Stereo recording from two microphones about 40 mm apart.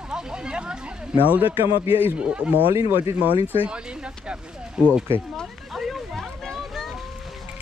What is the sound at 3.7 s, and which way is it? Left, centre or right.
Speech, right.